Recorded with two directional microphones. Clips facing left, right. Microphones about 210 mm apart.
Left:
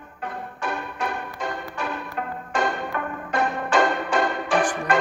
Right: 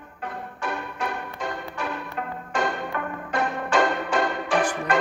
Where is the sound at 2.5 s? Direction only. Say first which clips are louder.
Left 1 dB; 50° left (ahead or behind).